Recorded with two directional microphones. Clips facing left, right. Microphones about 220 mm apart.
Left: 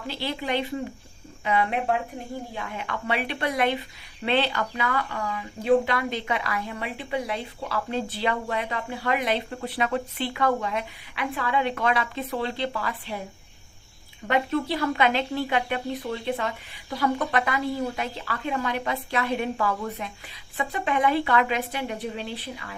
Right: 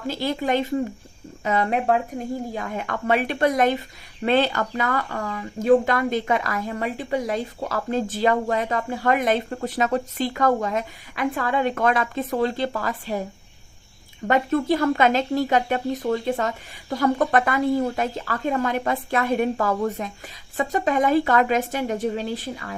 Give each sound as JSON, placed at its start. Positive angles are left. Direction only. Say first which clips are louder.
{"t": 0.1, "sound": "speech", "louder": "right 5 dB", "side_deg": -45}
{"t": 14.3, "sound": "speech", "louder": "right 4 dB", "side_deg": -45}